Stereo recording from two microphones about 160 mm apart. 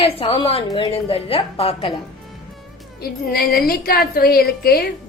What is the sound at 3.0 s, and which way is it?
A woman's voice, 70° left (ahead or behind).